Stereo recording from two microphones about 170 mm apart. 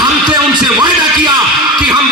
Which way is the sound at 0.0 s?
25° right (ahead or behind).